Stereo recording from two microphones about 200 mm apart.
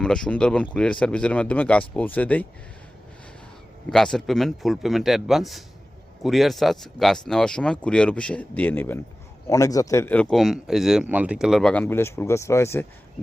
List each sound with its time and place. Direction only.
0.0 s speech: 5° left (ahead or behind)
3.8 s speech: 5° left (ahead or behind)